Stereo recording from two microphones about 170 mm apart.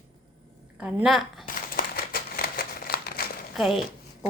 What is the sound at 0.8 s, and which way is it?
Speech, 10° right (ahead or behind).